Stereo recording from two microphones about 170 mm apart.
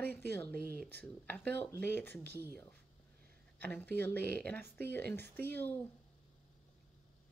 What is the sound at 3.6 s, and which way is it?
Speech, 10° left (ahead or behind).